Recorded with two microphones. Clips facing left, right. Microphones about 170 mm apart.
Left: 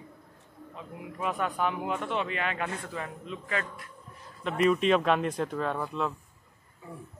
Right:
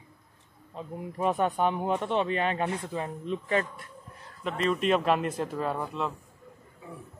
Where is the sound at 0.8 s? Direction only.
35° right (ahead or behind).